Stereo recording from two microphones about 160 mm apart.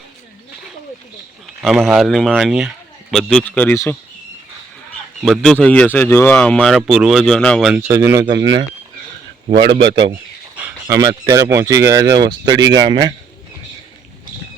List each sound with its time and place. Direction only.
1.6 s a man's voice: centre (ahead or behind)
5.2 s a man's voice: centre (ahead or behind)
7.7 s speech: 15° right (ahead or behind)
9.6 s a man's voice: 90° right
10.8 s speech: 20° right (ahead or behind)